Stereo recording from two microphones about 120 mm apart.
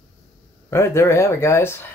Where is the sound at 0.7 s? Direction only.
20° left (ahead or behind).